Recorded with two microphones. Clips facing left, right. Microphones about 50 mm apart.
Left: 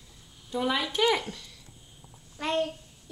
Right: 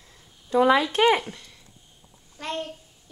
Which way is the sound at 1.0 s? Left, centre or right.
Right.